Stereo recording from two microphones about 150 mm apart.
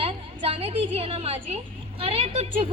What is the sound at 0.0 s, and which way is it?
A woman's voice, 40° right (ahead or behind).